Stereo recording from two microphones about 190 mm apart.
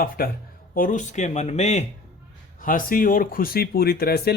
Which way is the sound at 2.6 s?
45° left (ahead or behind).